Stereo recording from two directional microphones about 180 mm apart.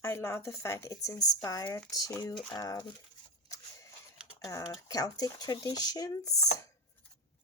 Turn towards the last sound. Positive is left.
turn(degrees=20)  # may be behind; listen again after turning